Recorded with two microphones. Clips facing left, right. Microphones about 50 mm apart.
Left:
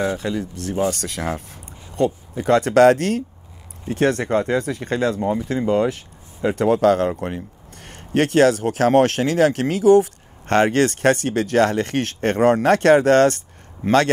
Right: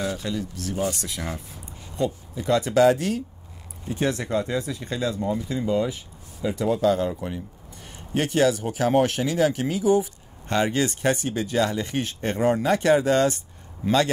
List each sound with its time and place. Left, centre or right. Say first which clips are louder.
0.0 s speech: left 5 dB; left
0.8 s speech: left 6 dB; left